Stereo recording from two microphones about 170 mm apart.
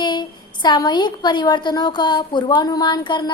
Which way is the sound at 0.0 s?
25° left (ahead or behind).